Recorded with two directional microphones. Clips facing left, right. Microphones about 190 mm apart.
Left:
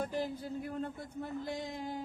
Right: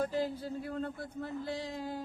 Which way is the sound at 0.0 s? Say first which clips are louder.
Right 3 dB; 15° left (ahead or behind).